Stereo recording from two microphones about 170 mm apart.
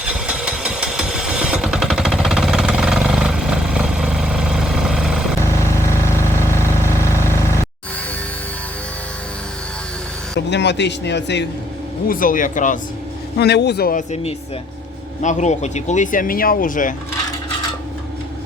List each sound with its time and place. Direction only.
0.0 s vehicle: 5° right (ahead or behind)
5.4 s vehicle: 15° left (ahead or behind)
10.3 s speech: 90° left
12.0 s speech: 55° left (ahead or behind)
13.3 s speech: 75° left (ahead or behind)
15.2 s speech: 45° left (ahead or behind)